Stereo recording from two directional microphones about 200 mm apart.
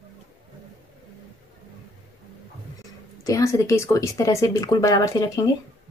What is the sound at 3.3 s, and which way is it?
Speech, 15° left (ahead or behind).